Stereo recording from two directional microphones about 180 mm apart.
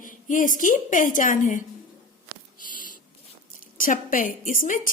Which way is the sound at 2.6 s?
50° left (ahead or behind).